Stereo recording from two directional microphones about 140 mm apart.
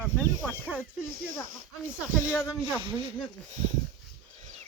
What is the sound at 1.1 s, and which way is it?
Speech, 85° right.